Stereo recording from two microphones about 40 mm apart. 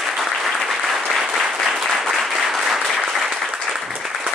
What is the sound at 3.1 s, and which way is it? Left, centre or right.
Applause, centre.